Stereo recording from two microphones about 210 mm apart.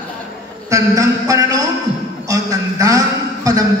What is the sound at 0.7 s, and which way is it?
Speech, 15° right (ahead or behind).